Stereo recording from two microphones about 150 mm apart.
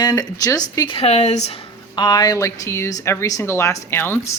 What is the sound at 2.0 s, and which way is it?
Speech, 25° left (ahead or behind).